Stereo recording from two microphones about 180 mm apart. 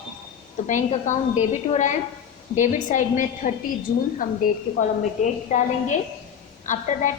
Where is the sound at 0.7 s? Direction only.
40° left (ahead or behind).